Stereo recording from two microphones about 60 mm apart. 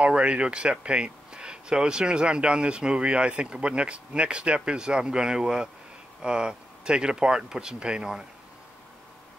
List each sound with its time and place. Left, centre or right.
0.0 s speech: centre